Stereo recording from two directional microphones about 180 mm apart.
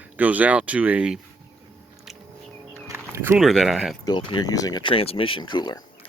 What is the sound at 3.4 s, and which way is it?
Speech, centre (ahead or behind).